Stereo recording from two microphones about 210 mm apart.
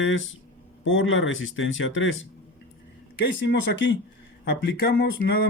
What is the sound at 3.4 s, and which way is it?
Speech, 55° left (ahead or behind).